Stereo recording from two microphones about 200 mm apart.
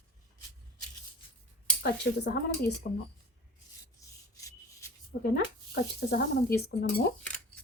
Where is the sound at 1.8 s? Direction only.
55° left (ahead or behind).